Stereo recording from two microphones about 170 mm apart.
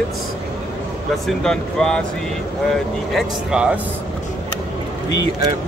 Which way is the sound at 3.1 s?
5° right (ahead or behind).